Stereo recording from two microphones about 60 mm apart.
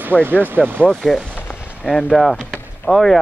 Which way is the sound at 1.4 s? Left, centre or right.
Left.